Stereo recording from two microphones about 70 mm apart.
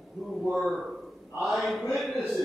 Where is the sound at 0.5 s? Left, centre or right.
Centre.